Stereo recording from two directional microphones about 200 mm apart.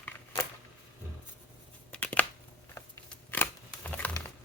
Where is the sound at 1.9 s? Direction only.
10° left (ahead or behind).